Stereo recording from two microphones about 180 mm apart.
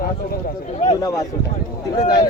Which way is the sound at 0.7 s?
40° left (ahead or behind).